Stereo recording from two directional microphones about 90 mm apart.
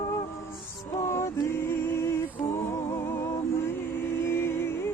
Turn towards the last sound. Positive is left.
turn(degrees=30)  # may be behind; listen again after turning